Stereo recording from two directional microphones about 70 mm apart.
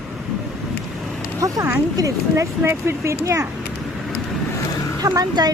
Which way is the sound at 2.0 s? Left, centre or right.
Right.